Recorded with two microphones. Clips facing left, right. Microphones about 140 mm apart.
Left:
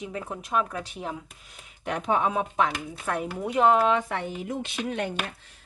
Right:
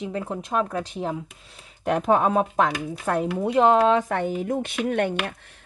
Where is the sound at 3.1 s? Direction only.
30° right (ahead or behind).